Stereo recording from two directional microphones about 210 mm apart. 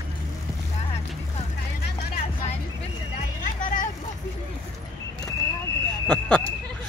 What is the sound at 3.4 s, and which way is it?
Vehicle, 40° left (ahead or behind).